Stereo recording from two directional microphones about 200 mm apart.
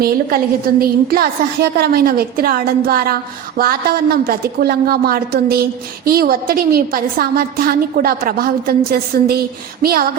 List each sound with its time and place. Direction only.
0.0 s a woman's voice: 50° right (ahead or behind)